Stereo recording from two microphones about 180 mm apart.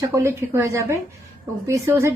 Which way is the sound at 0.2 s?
15° right (ahead or behind).